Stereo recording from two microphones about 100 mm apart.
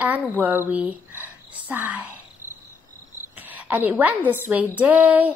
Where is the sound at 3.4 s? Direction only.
15° right (ahead or behind).